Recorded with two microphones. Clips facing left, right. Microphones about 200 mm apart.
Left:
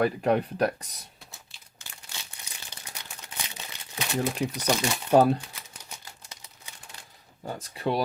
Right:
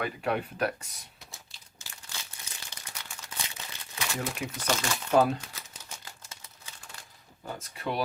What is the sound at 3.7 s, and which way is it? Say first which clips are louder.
Crumpling: even; 15° left (ahead or behind).